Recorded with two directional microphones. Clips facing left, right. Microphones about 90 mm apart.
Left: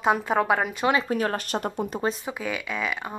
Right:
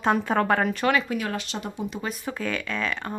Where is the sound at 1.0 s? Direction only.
40° left (ahead or behind).